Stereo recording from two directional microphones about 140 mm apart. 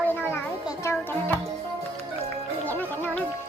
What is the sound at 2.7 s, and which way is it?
Music, 10° left (ahead or behind).